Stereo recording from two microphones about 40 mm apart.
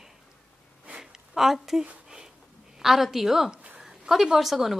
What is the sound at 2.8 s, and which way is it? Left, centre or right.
A woman's voice, centre.